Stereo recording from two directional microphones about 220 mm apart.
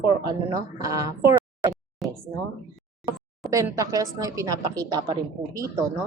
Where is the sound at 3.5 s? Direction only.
15° right (ahead or behind).